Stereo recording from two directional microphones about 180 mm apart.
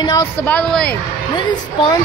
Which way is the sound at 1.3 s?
25° left (ahead or behind).